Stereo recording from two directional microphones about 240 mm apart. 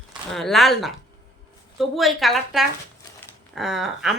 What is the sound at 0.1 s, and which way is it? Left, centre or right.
A woman's voice, centre.